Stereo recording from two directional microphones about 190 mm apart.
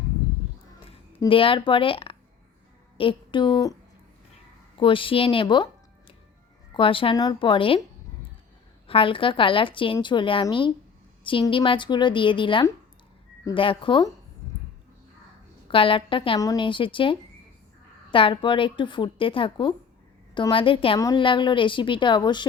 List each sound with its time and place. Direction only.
1.2 s a woman's voice: 30° left (ahead or behind)
4.8 s a woman's voice: 25° left (ahead or behind)
6.7 s a woman's voice: 30° left (ahead or behind)
8.9 s a woman's voice: 25° left (ahead or behind)
15.7 s a woman's voice: 30° left (ahead or behind)